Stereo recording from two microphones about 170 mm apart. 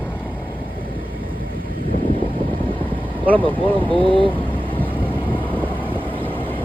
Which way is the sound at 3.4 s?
30° right (ahead or behind).